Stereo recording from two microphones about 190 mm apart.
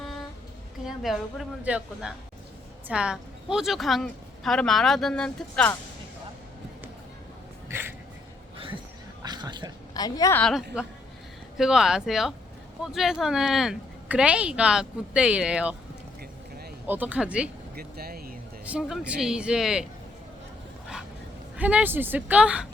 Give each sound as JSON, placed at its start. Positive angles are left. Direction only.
{"t": 0.0, "sound": "music", "side_deg": 0}
{"t": 0.9, "sound": "a woman's voice", "side_deg": 0}
{"t": 7.7, "sound": "a sound", "side_deg": -10}
{"t": 8.5, "sound": "a sound", "side_deg": -30}
{"t": 9.9, "sound": "a woman's voice", "side_deg": 20}
{"t": 10.4, "sound": "a woman's voice", "side_deg": 0}
{"t": 16.8, "sound": "speech", "side_deg": -10}
{"t": 17.7, "sound": "speech", "side_deg": -55}
{"t": 18.6, "sound": "a woman's voice", "side_deg": -5}
{"t": 21.5, "sound": "speech", "side_deg": -5}